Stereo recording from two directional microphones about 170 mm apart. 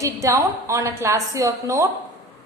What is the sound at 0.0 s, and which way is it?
A woman's voice, 20° right (ahead or behind).